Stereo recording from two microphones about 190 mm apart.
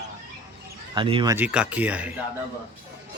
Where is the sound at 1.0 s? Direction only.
25° right (ahead or behind).